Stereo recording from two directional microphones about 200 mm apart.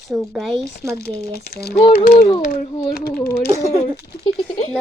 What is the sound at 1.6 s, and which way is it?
A child's voice, 50° left (ahead or behind).